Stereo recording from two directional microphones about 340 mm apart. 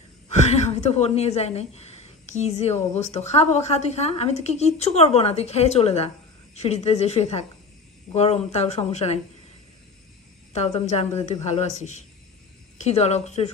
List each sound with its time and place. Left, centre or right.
0.5 s a woman's voice: centre
10.5 s a woman's voice: centre